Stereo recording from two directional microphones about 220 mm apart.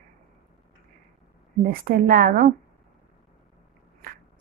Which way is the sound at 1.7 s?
40° right (ahead or behind).